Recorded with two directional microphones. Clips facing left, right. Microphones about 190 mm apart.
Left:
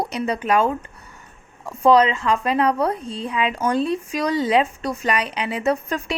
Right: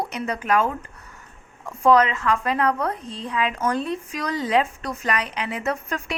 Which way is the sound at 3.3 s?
25° left (ahead or behind).